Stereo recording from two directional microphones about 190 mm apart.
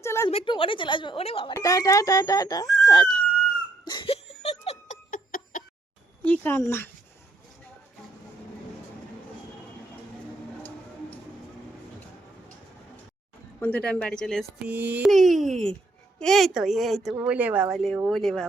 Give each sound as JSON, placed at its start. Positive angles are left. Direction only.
{"t": 0.0, "sound": "a sound", "side_deg": 15}
{"t": 0.3, "sound": "speech", "side_deg": 30}
{"t": 1.5, "sound": "speech", "side_deg": 20}
{"t": 3.8, "sound": "giggle", "side_deg": 25}
{"t": 6.2, "sound": "speech", "side_deg": 10}
{"t": 13.6, "sound": "speech", "side_deg": 5}